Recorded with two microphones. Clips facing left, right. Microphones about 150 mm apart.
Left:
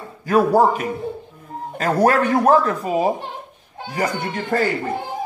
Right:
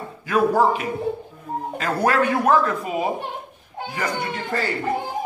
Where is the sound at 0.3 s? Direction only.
40° left (ahead or behind).